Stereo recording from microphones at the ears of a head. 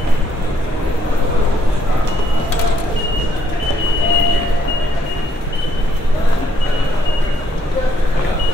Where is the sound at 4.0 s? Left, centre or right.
Left.